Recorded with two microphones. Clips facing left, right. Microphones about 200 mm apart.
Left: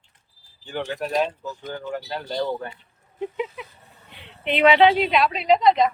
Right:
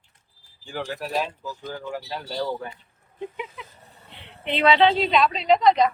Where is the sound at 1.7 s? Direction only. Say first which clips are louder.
Left 3 dB; 5° right (ahead or behind).